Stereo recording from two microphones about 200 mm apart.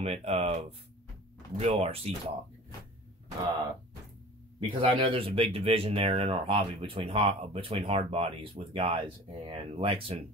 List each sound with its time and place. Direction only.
0.0 s speech: 30° right (ahead or behind)
4.6 s speech: 25° right (ahead or behind)